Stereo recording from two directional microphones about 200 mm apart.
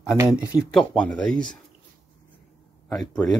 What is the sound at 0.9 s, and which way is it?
Speech, 5° left (ahead or behind).